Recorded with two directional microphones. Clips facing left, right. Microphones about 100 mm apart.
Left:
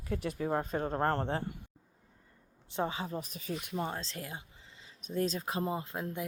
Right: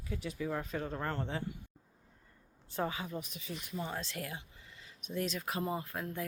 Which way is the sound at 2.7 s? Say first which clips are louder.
Left 2 dB; 25° left (ahead or behind).